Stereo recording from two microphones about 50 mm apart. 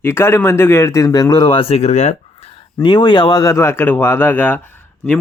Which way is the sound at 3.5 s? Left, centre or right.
Left.